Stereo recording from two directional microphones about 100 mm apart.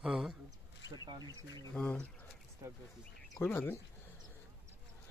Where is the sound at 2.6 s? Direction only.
35° right (ahead or behind).